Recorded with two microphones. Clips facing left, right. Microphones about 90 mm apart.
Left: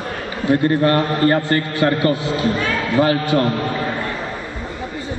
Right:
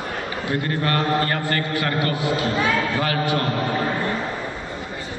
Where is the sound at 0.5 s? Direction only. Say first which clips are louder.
Left 8 dB; 30° left (ahead or behind).